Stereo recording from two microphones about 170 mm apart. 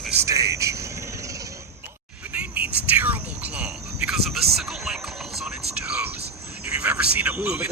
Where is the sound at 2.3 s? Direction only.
10° right (ahead or behind).